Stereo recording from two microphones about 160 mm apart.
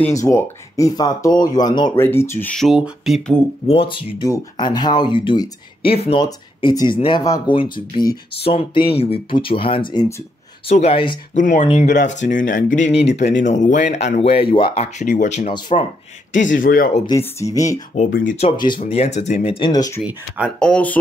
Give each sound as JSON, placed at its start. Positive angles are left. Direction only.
{"t": 0.1, "sound": "speech", "side_deg": 20}
{"t": 2.5, "sound": "speech", "side_deg": 0}
{"t": 3.6, "sound": "speech", "side_deg": 35}
{"t": 6.2, "sound": "speech", "side_deg": 25}
{"t": 11.3, "sound": "speech", "side_deg": 50}
{"t": 12.9, "sound": "speech", "side_deg": 90}
{"t": 13.2, "sound": "speech", "side_deg": 50}
{"t": 16.3, "sound": "speech", "side_deg": 55}
{"t": 17.2, "sound": "speech", "side_deg": 20}
{"t": 17.9, "sound": "speech", "side_deg": 55}
{"t": 18.4, "sound": "speech", "side_deg": 30}
{"t": 19.7, "sound": "speech", "side_deg": 25}
{"t": 20.0, "sound": "speech", "side_deg": -5}
{"t": 20.5, "sound": "speech", "side_deg": 5}